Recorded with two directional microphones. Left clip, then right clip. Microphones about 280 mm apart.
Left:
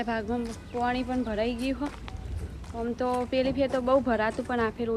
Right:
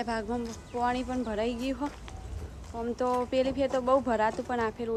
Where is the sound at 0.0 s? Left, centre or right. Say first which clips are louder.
Left 2 dB; centre.